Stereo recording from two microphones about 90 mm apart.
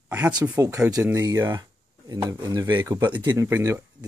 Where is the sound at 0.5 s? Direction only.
35° right (ahead or behind).